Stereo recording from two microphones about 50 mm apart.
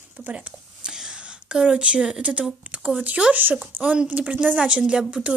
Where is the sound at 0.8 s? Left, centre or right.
Centre.